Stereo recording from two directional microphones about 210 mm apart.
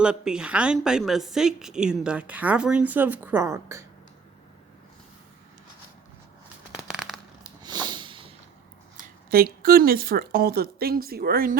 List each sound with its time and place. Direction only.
0.0 s a woman's voice: 5° right (ahead or behind)
6.7 s a sound: 5° right (ahead or behind)
7.6 s snort: 20° right (ahead or behind)
9.3 s a woman's voice: 45° right (ahead or behind)